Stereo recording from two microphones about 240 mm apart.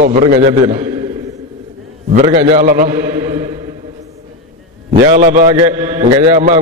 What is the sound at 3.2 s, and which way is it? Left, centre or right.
Chant, centre.